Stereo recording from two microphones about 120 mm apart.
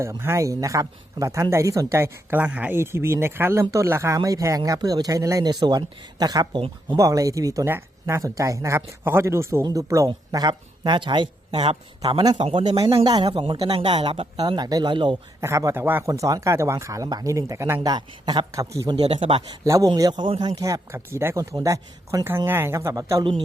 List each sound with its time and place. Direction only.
0.0 s speech: 25° right (ahead or behind); by 12.5 s 40° right (ahead or behind)
12.5 s speech: 50° right (ahead or behind)
13.1 s speech: 35° right (ahead or behind)
14.3 s speech: 35° right (ahead or behind)
15.4 s speech: 25° right (ahead or behind)
17.7 s speech: 35° right (ahead or behind)
18.9 s speech: 55° right (ahead or behind)
19.6 s speech: 25° right (ahead or behind)
19.9 s speech: 35° right (ahead or behind)